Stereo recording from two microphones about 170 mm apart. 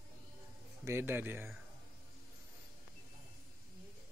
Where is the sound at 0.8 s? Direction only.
15° right (ahead or behind).